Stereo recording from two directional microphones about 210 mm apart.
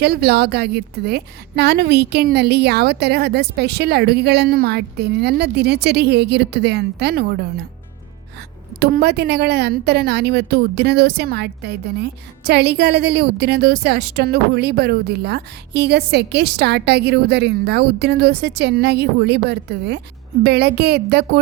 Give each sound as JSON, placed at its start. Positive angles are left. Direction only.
{"t": 0.0, "sound": "a woman's voice", "side_deg": -50}
{"t": 8.8, "sound": "a woman's voice", "side_deg": -50}